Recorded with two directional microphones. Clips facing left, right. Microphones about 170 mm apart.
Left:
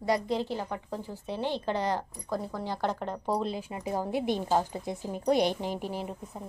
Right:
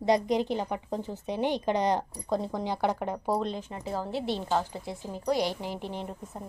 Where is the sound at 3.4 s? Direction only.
10° left (ahead or behind).